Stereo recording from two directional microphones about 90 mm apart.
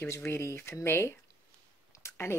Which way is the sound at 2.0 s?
25° left (ahead or behind).